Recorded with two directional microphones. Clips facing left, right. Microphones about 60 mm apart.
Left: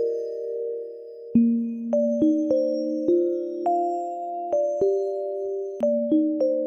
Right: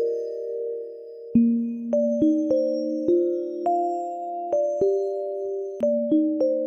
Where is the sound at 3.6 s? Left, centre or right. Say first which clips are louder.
Even; centre.